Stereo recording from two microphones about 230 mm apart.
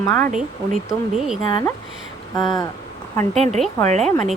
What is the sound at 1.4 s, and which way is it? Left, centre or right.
Speech, centre.